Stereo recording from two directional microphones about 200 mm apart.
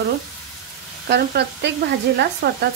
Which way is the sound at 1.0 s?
55° right (ahead or behind).